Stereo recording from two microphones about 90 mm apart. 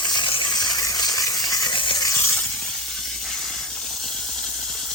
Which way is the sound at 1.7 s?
65° left (ahead or behind).